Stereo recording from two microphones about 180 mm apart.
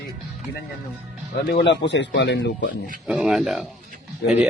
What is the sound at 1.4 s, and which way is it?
Speech, 65° left (ahead or behind).